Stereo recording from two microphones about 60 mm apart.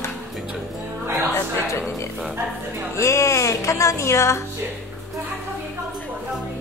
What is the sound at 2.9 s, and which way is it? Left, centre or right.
Speech, left.